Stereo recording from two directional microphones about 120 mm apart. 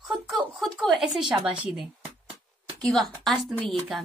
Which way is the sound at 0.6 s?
Centre (ahead or behind).